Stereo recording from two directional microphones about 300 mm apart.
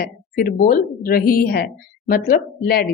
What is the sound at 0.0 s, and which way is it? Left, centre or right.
A woman's voice, left.